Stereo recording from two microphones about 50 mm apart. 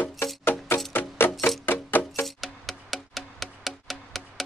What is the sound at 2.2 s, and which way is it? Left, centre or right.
Music, centre.